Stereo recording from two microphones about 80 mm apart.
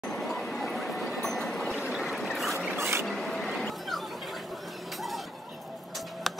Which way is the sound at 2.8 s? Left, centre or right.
Right.